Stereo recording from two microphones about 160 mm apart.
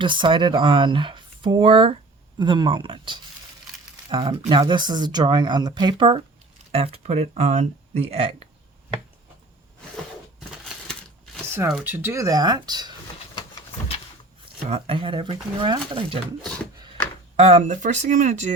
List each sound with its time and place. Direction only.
0.0 s speech: 30° right (ahead or behind)
11.8 s speech: 10° right (ahead or behind)
13.7 s a sound: 40° left (ahead or behind)
14.7 s speech: 35° right (ahead or behind)
17.3 s speech: 40° right (ahead or behind)